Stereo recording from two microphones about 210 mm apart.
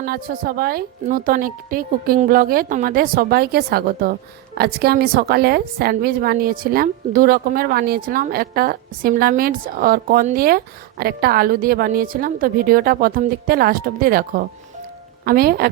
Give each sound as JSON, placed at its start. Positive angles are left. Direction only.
{"t": 0.0, "sound": "a woman's voice", "side_deg": -45}